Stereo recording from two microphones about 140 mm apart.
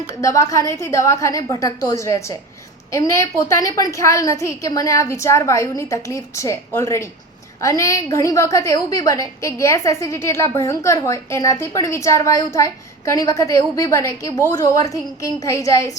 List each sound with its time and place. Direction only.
0.1 s a woman's voice: 20° left (ahead or behind)